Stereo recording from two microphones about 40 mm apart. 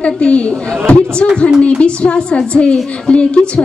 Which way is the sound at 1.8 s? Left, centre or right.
Left.